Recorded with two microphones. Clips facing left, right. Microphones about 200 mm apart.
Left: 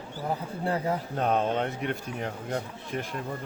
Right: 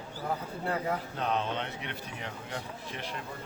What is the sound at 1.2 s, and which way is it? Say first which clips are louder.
Speech: left 9 dB; 50° left (ahead or behind).